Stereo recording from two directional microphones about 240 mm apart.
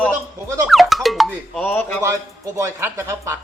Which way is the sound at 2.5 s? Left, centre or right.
Centre.